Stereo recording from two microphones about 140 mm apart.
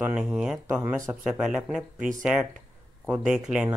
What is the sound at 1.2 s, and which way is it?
Speech, 5° right (ahead or behind).